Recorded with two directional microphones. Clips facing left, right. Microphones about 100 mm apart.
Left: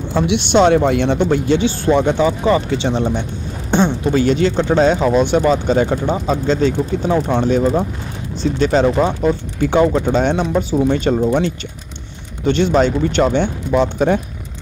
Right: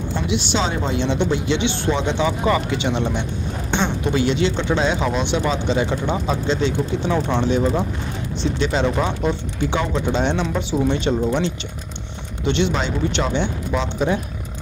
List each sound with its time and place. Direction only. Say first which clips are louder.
0.1 s speech: left 8 dB; 65° left (ahead or behind)
2.2 s speech: left 4 dB; 30° left (ahead or behind); by 14.2 s 50° left (ahead or behind)